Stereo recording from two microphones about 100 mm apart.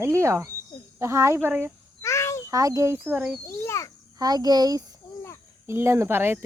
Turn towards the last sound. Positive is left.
turn(degrees=-20)  # may be behind; listen again after turning